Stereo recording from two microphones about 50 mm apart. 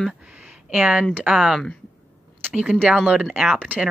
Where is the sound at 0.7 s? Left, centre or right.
Right.